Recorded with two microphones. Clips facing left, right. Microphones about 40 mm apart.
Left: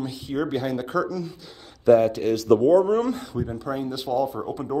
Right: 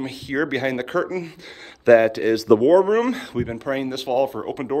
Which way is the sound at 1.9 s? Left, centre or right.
Right.